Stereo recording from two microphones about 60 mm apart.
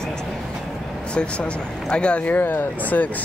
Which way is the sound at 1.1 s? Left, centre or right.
Centre.